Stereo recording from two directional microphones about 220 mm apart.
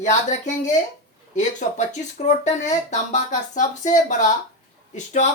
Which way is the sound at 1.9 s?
35° left (ahead or behind).